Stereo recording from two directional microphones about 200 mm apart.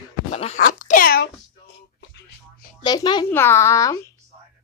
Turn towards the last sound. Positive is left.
turn(degrees=15)  # may be behind; listen again after turning